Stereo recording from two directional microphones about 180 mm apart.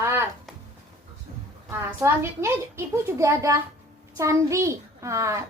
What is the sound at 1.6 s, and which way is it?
A woman's voice, 15° right (ahead or behind).